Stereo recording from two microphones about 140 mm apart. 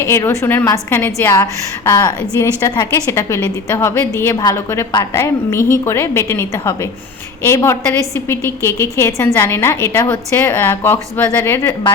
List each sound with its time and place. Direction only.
0.0 s a woman's voice: 20° left (ahead or behind)
2.0 s a woman's voice: 25° left (ahead or behind)